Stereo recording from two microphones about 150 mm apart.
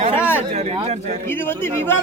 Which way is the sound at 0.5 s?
45° right (ahead or behind).